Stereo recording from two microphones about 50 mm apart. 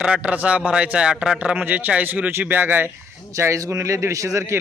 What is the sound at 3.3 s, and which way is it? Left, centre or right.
A man's voice, right.